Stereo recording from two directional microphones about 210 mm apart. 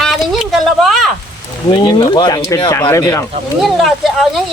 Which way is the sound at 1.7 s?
20° left (ahead or behind).